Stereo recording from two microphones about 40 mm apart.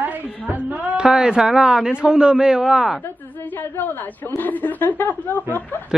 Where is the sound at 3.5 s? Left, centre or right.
Left.